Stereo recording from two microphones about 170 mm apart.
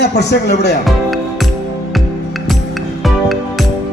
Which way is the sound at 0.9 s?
Centre (ahead or behind).